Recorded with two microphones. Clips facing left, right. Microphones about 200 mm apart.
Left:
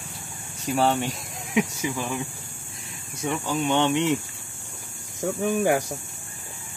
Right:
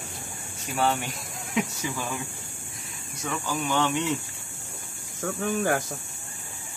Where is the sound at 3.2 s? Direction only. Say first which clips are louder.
Left 4 dB; 25° left (ahead or behind).